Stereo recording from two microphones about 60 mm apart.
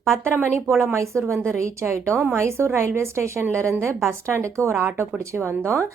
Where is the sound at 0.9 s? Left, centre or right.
Right.